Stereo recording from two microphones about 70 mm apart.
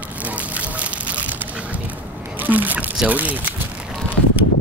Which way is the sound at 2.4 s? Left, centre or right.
Right.